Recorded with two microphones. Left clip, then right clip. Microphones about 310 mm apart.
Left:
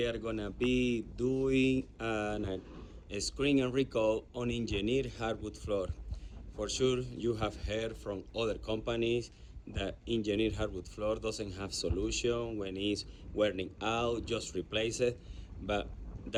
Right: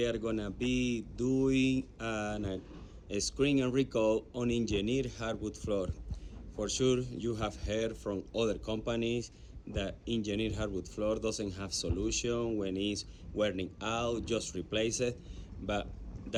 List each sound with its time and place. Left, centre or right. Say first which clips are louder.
0.3 s speech: left 1 dB; centre
7.9 s speech: right 2 dB; right
8.3 s speech: right 1 dB; centre